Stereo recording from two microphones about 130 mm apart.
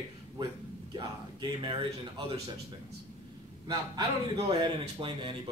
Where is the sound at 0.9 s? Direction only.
35° right (ahead or behind).